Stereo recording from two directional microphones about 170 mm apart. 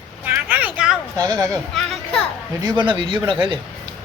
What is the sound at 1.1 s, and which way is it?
Speech, 20° right (ahead or behind).